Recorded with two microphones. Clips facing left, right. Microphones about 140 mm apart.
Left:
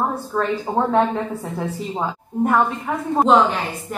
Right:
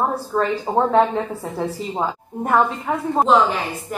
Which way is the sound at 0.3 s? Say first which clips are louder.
Right 2 dB; 20° right (ahead or behind).